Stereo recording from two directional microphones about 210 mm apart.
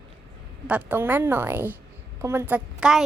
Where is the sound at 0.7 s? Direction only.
10° right (ahead or behind).